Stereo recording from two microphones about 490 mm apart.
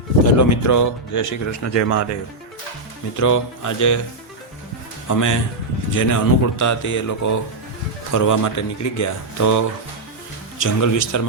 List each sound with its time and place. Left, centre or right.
0.3 s speech: left
3.2 s speech: left
5.0 s speech: left